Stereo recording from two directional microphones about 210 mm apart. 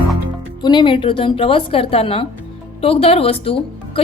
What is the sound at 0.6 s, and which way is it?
Speech, 20° left (ahead or behind).